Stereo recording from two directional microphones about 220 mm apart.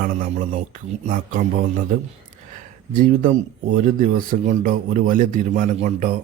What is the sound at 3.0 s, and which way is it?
Speech, 35° right (ahead or behind).